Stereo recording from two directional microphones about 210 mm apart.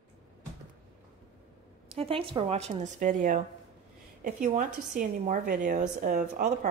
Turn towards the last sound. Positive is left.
turn(degrees=-40)  # may be behind; listen again after turning